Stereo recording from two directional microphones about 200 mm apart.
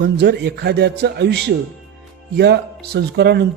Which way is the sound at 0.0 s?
55° right (ahead or behind).